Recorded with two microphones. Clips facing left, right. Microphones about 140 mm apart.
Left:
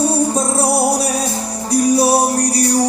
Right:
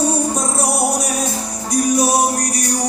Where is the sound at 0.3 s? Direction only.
30° left (ahead or behind).